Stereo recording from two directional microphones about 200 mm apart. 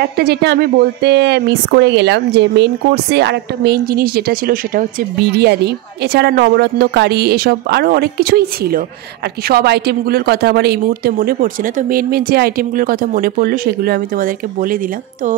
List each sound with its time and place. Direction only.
0.0 s a woman's voice: 55° right (ahead or behind)